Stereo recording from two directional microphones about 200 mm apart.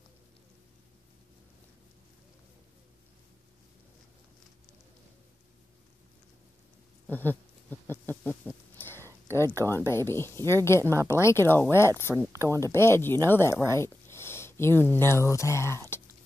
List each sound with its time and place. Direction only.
7.1 s a sound: 10° left (ahead or behind)
9.0 s a sound: 15° right (ahead or behind)
9.7 s speech: 10° left (ahead or behind)
10.9 s speech: 15° right (ahead or behind)
11.1 s speech: 15° left (ahead or behind)
12.3 s speech: 15° right (ahead or behind)
12.7 s speech: 10° left (ahead or behind)